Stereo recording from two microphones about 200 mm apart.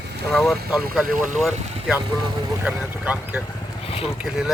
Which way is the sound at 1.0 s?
45° right (ahead or behind).